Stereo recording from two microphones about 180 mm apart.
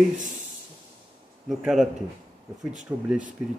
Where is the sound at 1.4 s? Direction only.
Centre (ahead or behind).